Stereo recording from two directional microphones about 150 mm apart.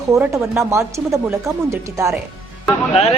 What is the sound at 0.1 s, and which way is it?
Speech, 20° right (ahead or behind).